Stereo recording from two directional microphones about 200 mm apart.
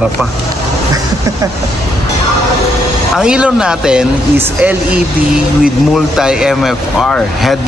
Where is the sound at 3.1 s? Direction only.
5° right (ahead or behind).